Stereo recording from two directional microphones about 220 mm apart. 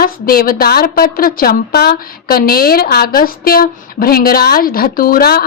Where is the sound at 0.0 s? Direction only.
40° left (ahead or behind).